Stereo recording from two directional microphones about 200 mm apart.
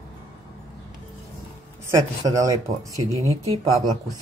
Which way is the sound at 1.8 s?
15° right (ahead or behind).